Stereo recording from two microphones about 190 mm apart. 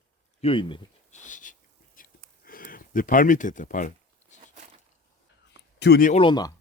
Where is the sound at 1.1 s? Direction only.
40° left (ahead or behind).